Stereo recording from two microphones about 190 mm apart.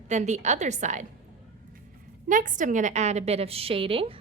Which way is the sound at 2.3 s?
45° right (ahead or behind).